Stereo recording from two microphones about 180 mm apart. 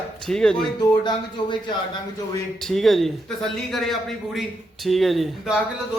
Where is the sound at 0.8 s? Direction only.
25° left (ahead or behind).